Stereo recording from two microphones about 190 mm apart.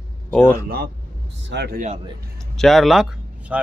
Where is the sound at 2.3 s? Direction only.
Centre (ahead or behind).